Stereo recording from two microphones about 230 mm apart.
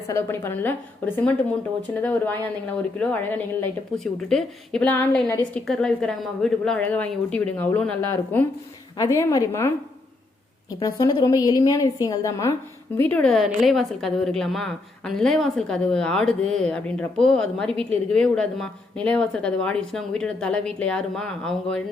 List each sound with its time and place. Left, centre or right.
0.1 s a woman's voice: centre
10.8 s a woman's voice: centre